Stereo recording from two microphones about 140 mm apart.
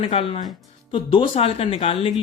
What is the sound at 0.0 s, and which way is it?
Speech, 40° left (ahead or behind).